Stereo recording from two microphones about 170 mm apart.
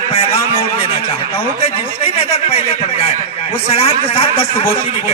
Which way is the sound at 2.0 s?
35° left (ahead or behind).